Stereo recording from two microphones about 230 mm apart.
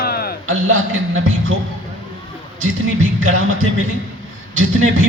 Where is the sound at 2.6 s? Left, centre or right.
Right.